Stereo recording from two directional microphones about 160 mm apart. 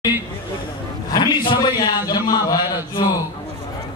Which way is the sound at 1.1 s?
25° left (ahead or behind).